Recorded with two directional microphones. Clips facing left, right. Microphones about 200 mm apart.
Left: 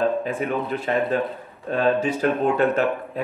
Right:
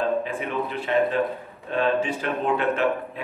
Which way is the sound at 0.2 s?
40° left (ahead or behind).